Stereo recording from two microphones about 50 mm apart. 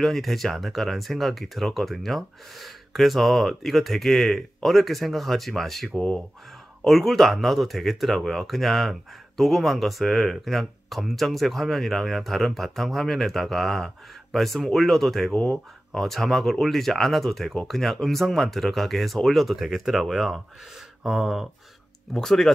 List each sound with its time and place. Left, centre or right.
0.0 s speech: centre
6.9 s speech: centre
15.4 s speech: left
16.0 s speech: centre
21.0 s speech: centre
22.1 s speech: centre